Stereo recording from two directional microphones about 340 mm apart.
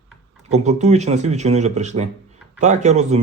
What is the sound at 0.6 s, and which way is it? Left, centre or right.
Speech, centre.